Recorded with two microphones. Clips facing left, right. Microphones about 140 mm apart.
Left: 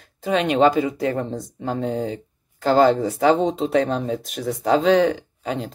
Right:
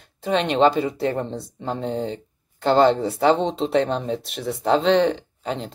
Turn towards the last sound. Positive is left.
turn(degrees=5)  # may be behind; listen again after turning